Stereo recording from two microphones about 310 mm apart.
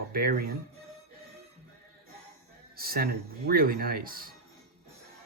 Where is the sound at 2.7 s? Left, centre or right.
Right.